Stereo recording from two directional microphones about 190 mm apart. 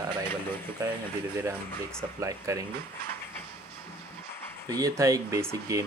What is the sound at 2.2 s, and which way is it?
Speech, 15° right (ahead or behind).